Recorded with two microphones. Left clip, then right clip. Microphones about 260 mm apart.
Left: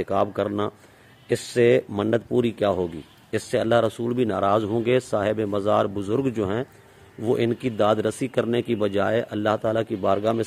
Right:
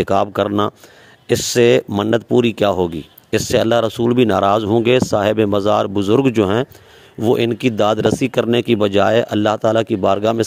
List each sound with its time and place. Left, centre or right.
0.0 s speech: right